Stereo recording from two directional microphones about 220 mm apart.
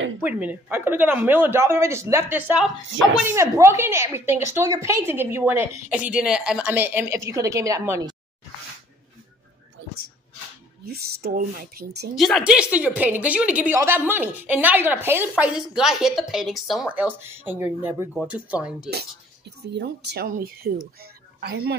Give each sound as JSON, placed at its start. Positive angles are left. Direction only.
{"t": 0.2, "sound": "a woman's voice", "side_deg": -5}
{"t": 10.9, "sound": "speech", "side_deg": -45}
{"t": 12.2, "sound": "a woman's voice", "side_deg": 0}
{"t": 19.6, "sound": "speech", "side_deg": -50}
{"t": 21.0, "sound": "a sound", "side_deg": -45}